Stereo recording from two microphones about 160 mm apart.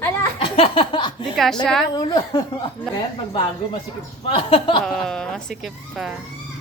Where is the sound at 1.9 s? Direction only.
25° left (ahead or behind).